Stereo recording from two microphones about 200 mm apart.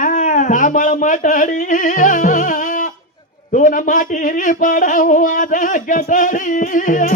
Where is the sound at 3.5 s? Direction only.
40° left (ahead or behind).